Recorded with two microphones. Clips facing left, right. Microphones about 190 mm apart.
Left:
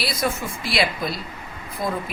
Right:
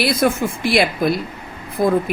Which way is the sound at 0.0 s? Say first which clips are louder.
Right 8 dB; 55° right (ahead or behind).